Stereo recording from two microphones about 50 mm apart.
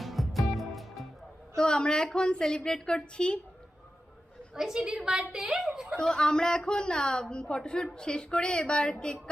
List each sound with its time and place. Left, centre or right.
0.0 s music: centre
1.5 s a man's voice: centre
4.5 s a woman's voice: centre
6.0 s a woman's voice: centre